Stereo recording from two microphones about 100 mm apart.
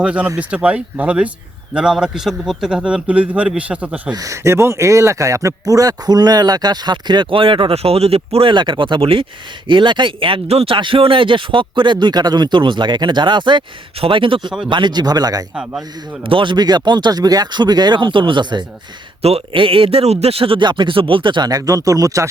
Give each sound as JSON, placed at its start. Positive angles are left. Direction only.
{"t": 0.0, "sound": "a man's voice", "side_deg": -10}
{"t": 4.1, "sound": "a man's voice", "side_deg": -35}
{"t": 10.8, "sound": "a man's voice", "side_deg": -60}
{"t": 16.2, "sound": "speech", "side_deg": -60}
{"t": 19.2, "sound": "a man's voice", "side_deg": -75}
{"t": 21.5, "sound": "speech", "side_deg": -35}